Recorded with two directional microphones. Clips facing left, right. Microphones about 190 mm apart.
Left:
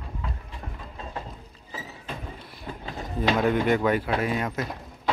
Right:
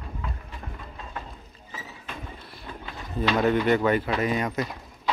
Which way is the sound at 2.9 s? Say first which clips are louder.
Left 1 dB; 40° left (ahead or behind).